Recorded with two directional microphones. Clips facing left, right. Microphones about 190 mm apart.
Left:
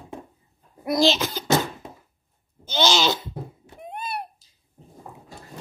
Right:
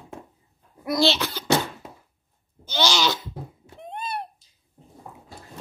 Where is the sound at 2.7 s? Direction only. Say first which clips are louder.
Left 2 dB; 25° left (ahead or behind).